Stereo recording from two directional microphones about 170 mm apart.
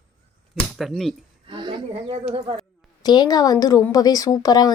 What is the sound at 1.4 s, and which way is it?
Speech, 30° right (ahead or behind).